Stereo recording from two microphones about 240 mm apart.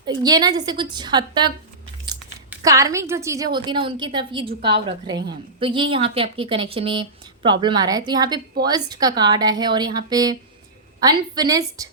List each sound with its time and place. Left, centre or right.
0.0 s a woman's voice: centre
2.6 s a woman's voice: centre